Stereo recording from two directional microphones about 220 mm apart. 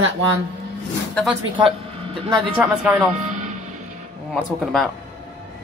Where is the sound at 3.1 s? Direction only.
35° right (ahead or behind).